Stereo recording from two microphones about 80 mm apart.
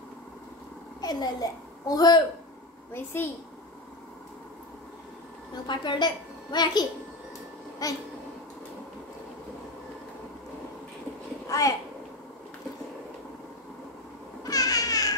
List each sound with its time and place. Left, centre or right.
1.0 s a child's voice: left
2.9 s a woman's voice: left
5.7 s a woman's voice: left
7.8 s speech: left
11.4 s a child's voice: left
14.4 s a sound: left